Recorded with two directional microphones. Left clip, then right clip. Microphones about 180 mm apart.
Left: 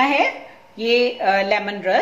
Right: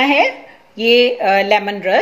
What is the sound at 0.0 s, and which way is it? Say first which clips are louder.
A woman's voice: right 4 dB; 45° right (ahead or behind).